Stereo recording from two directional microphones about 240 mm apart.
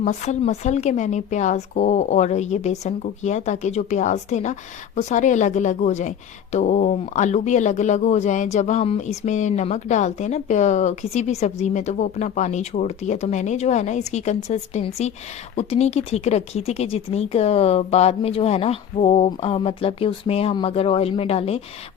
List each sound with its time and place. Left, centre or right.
0.0 s a woman's voice: left